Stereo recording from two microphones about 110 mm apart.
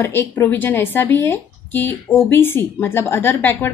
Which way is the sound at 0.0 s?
20° left (ahead or behind).